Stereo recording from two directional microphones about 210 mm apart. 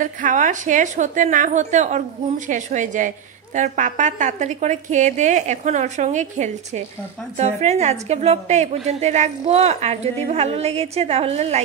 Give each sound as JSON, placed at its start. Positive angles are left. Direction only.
{"t": 0.0, "sound": "a woman's voice", "side_deg": -35}